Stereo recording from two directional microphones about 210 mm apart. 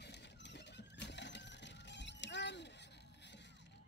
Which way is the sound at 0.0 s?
55° left (ahead or behind).